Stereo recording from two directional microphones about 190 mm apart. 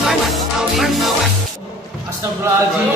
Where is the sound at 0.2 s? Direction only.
Centre (ahead or behind).